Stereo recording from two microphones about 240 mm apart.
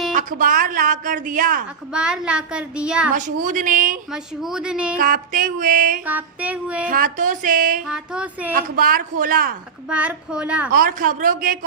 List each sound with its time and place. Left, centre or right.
0.1 s speech: right
1.9 s a woman's voice: centre
3.2 s speech: right
4.1 s a woman's voice: centre
4.9 s speech: right
6.1 s child singing: centre
6.8 s speech: right
7.9 s a woman's voice: centre
8.5 s speech: right
9.9 s a woman's voice: centre
10.7 s speech: right